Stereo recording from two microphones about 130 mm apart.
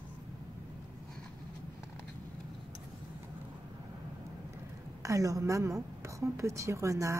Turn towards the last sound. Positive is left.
turn(degrees=-25)  # may be behind; listen again after turning